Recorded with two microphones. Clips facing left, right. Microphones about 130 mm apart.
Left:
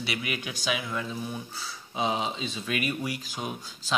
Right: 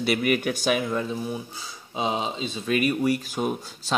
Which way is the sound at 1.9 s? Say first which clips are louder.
Right 2 dB; 25° right (ahead or behind).